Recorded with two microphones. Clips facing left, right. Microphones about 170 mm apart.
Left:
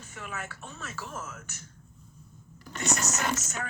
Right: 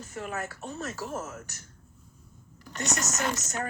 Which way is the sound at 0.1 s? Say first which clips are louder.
Right 5 dB; 40° right (ahead or behind).